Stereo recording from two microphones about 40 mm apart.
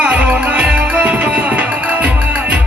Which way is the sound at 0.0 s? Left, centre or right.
Right.